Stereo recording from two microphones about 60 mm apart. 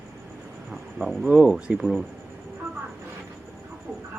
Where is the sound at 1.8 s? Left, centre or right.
Centre.